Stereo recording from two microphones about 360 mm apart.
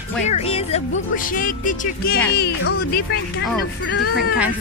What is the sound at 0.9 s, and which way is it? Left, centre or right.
Speech, left.